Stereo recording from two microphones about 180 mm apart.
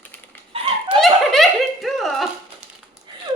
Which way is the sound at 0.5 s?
30° right (ahead or behind).